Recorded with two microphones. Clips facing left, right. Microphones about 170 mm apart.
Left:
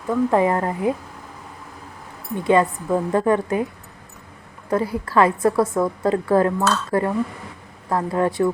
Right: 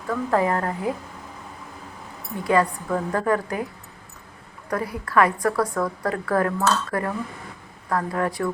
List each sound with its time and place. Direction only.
0.1 s a woman's voice: 20° left (ahead or behind)
2.4 s a woman's voice: 25° left (ahead or behind)
4.7 s a woman's voice: 25° left (ahead or behind)